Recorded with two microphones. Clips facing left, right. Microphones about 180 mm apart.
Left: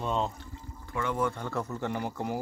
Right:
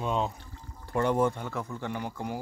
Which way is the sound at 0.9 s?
40° right (ahead or behind).